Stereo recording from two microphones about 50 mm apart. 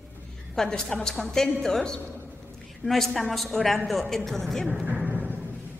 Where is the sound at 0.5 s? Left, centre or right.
Centre.